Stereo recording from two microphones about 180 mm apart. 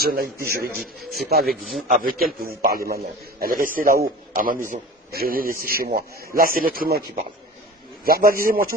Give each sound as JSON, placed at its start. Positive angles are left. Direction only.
{"t": 0.0, "sound": "a man's voice", "side_deg": -55}
{"t": 1.4, "sound": "a man's voice", "side_deg": 0}
{"t": 1.9, "sound": "a man's voice", "side_deg": -50}
{"t": 8.0, "sound": "a man's voice", "side_deg": -55}